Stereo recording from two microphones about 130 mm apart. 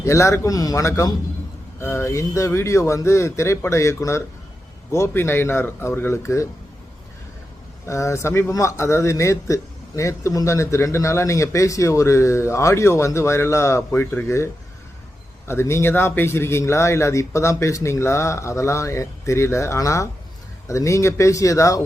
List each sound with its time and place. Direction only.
0.0 s speech: 25° left (ahead or behind)
7.9 s speech: 25° left (ahead or behind)